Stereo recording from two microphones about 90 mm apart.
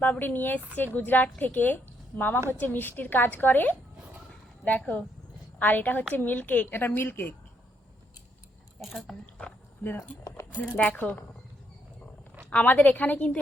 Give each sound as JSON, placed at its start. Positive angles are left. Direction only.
{"t": 0.0, "sound": "a woman's voice", "side_deg": 20}
{"t": 8.8, "sound": "speech", "side_deg": 0}
{"t": 9.2, "sound": "dog", "side_deg": 20}
{"t": 10.0, "sound": "speech", "side_deg": 35}
{"t": 10.8, "sound": "a woman's voice", "side_deg": 20}
{"t": 12.5, "sound": "a woman's voice", "side_deg": 15}